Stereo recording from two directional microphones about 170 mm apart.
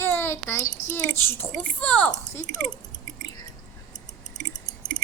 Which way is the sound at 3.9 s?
45° left (ahead or behind).